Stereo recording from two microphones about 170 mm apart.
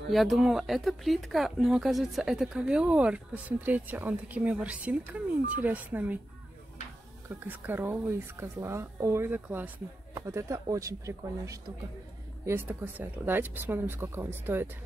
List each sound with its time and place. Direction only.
0.1 s speech: centre (ahead or behind)
7.2 s speech: 10° right (ahead or behind)